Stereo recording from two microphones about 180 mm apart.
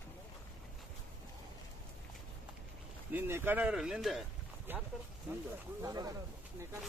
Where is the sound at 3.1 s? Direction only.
10° right (ahead or behind).